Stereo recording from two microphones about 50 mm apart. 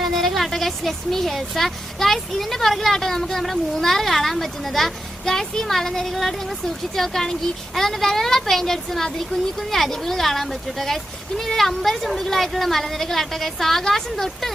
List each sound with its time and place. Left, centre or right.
0.0 s a woman's voice: centre